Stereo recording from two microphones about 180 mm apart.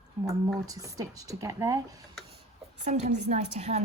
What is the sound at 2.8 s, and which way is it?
Speech, 40° right (ahead or behind).